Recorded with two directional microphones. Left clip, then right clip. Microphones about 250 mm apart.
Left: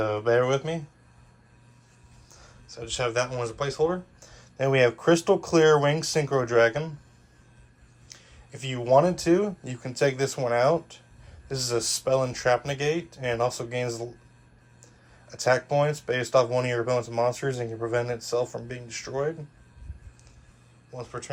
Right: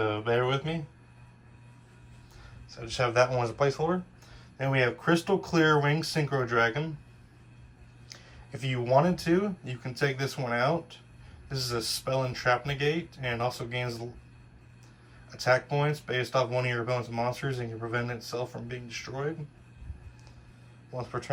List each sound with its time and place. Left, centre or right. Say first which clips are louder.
0.3 s speech: left 8 dB; left
2.6 s speech: left 1 dB; centre
4.4 s speech: left 6 dB; left
8.1 s speech: right 1 dB; centre
15.3 s speech: left 3 dB; centre
20.9 s speech: right 2 dB; centre